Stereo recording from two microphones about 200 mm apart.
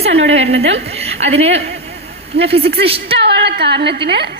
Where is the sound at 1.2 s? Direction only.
30° right (ahead or behind).